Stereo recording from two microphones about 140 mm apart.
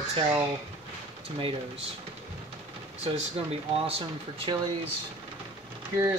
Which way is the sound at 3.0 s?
45° right (ahead or behind).